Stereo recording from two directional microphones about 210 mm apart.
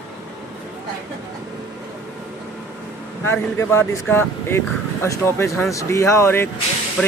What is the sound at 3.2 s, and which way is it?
Speech, 10° left (ahead or behind).